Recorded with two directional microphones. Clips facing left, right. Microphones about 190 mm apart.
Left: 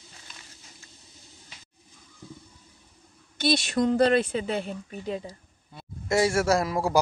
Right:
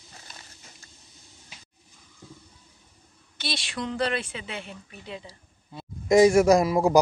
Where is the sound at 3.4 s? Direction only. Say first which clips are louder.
Left 9 dB; 45° left (ahead or behind).